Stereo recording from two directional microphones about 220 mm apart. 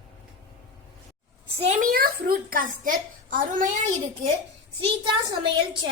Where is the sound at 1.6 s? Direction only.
35° right (ahead or behind).